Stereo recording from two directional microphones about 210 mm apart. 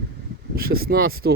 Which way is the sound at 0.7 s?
45° right (ahead or behind).